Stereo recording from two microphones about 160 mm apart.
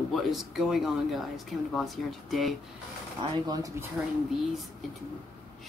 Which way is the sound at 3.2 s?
25° right (ahead or behind).